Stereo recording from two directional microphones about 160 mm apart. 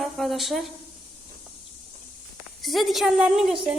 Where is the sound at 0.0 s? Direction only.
Centre (ahead or behind).